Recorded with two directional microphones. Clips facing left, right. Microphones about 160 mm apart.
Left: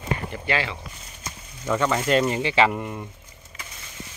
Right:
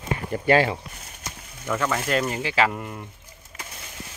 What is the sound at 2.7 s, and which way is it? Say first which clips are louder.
Speech: left 3 dB; 10° left (ahead or behind).